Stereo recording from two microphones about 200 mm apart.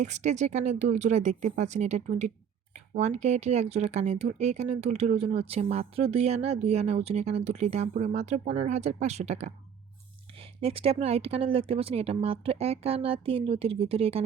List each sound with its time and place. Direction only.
0.0 s speech: 35° right (ahead or behind)
10.6 s speech: 30° right (ahead or behind)